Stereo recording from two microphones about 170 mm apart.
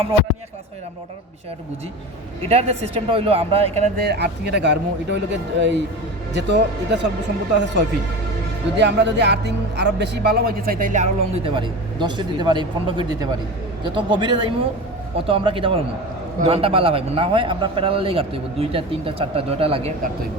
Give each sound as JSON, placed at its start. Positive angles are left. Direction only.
{"t": 2.5, "sound": "a man's voice", "side_deg": -35}
{"t": 4.0, "sound": "speech", "side_deg": -75}
{"t": 11.5, "sound": "a man's voice", "side_deg": -25}